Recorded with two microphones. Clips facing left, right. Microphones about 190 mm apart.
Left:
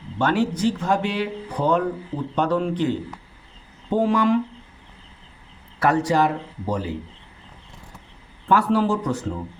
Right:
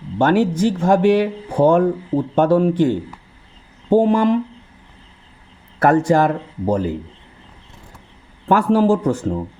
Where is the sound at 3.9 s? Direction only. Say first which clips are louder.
Right 4 dB; 45° right (ahead or behind).